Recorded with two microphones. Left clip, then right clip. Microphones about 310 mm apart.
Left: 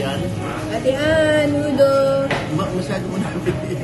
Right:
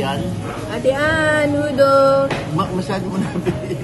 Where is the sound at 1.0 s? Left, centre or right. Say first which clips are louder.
Left 2 dB; right.